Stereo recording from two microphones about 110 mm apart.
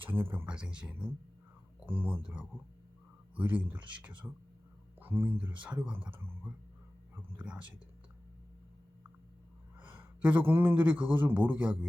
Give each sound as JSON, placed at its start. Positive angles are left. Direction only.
{"t": 0.0, "sound": "speech", "side_deg": -20}
{"t": 4.2, "sound": "speech", "side_deg": 0}
{"t": 4.9, "sound": "speech", "side_deg": -20}
{"t": 9.8, "sound": "a man's voice", "side_deg": -15}